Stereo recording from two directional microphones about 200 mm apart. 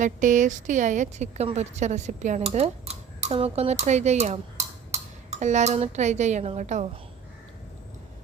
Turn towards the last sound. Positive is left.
turn(degrees=-35)  # may be behind; listen again after turning